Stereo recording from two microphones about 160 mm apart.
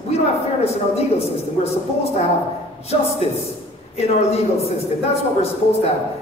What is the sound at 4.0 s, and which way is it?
A man's voice, 40° left (ahead or behind).